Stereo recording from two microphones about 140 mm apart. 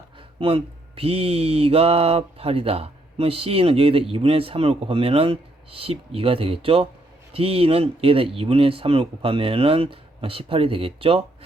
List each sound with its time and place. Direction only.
0.3 s speech: 40° right (ahead or behind)